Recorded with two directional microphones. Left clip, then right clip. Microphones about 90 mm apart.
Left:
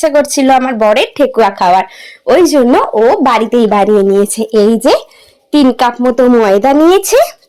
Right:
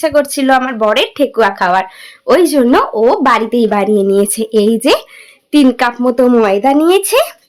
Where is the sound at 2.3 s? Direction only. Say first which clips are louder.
Left 2 dB; 20° left (ahead or behind).